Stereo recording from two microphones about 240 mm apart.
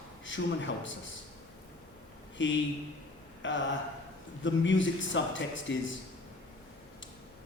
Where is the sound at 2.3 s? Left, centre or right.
Left.